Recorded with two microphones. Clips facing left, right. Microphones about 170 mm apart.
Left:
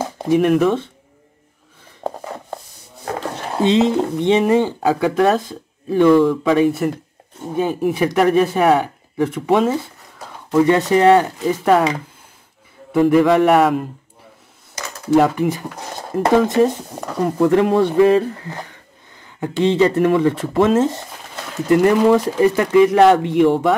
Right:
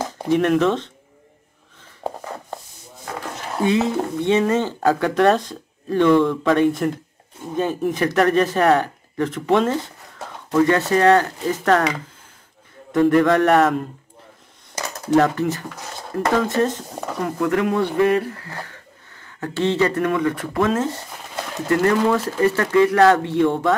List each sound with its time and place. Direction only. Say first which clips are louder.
0.0 s speech: left 3 dB; 10° left (ahead or behind)
2.0 s a sound: left 2 dB; 10° right (ahead or behind)
3.2 s speech: left 3 dB; 25° left (ahead or behind); by 11.9 s 10° left (ahead or behind)
12.9 s a man's voice: left 2 dB; 5° left (ahead or behind)
15.1 s speech: left 2 dB; 10° left (ahead or behind)
17.2 s speech: left 6 dB; 30° left (ahead or behind)